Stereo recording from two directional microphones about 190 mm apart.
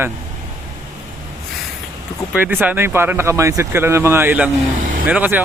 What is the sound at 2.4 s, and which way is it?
Speech, 10° right (ahead or behind).